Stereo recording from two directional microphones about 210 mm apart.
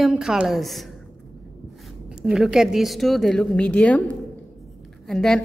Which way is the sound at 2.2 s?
5° right (ahead or behind).